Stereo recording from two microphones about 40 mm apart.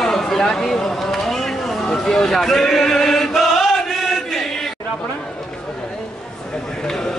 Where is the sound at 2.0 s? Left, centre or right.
Centre.